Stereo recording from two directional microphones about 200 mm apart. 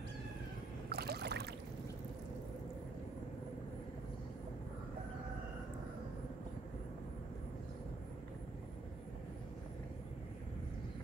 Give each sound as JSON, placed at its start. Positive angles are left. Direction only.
{"t": 0.8, "sound": "boat", "side_deg": -50}